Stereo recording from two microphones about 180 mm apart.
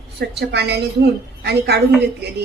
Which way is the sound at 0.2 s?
65° right (ahead or behind).